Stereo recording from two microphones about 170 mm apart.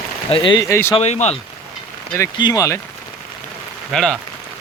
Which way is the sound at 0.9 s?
40° left (ahead or behind).